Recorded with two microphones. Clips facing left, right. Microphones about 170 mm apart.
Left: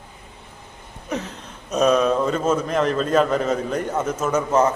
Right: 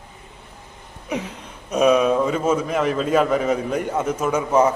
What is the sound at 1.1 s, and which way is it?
A man's voice, 10° right (ahead or behind).